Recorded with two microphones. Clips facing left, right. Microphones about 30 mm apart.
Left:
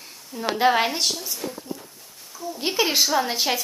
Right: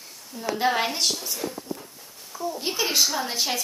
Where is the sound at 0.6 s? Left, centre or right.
Centre.